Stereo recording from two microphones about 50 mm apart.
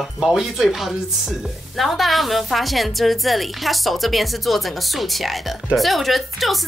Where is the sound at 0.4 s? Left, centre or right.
Centre.